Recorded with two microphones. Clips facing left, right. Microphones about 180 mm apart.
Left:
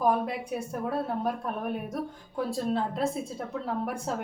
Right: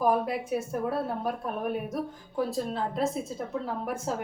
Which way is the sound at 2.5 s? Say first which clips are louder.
Left 2 dB; centre (ahead or behind).